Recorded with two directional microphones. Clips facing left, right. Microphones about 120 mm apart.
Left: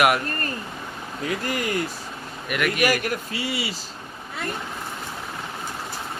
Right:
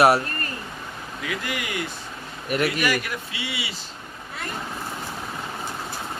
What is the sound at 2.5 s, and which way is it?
Speech, 35° right (ahead or behind).